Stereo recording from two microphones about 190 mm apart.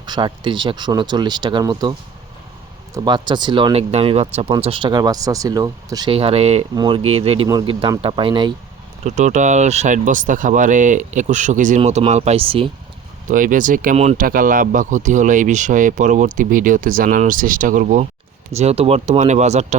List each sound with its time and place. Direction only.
0.0 s speech: 25° right (ahead or behind)
9.0 s speech: 40° right (ahead or behind)
13.2 s speech: 45° right (ahead or behind)